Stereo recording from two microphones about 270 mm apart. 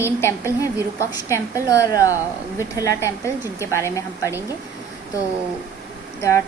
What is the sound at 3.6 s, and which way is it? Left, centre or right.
Speech, centre.